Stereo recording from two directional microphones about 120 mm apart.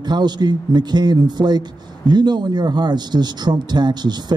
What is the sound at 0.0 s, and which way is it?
A man's voice, 35° right (ahead or behind).